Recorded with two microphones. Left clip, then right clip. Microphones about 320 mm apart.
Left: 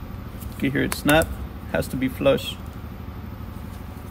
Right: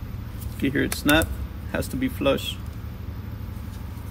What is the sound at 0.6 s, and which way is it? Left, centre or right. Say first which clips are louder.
Speech: left 1 dB; left.